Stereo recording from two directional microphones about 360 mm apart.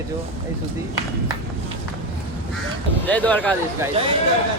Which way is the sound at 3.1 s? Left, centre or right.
Centre.